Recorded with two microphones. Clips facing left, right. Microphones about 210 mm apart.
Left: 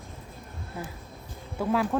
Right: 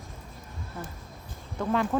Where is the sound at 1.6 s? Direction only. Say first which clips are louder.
Left 1 dB; 5° left (ahead or behind).